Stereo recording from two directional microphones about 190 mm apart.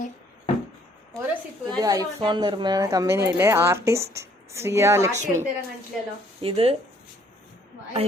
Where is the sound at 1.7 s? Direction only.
20° right (ahead or behind).